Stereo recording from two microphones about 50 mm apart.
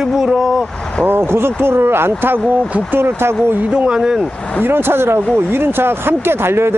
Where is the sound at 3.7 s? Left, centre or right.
Centre.